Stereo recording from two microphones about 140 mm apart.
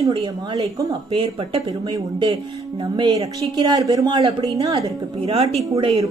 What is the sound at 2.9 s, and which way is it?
A woman's voice, 35° right (ahead or behind).